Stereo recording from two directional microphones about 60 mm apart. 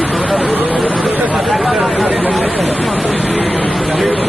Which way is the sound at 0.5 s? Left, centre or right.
Right.